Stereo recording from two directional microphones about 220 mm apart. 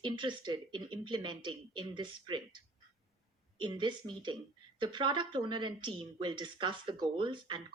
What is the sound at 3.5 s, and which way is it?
Speech, 20° right (ahead or behind).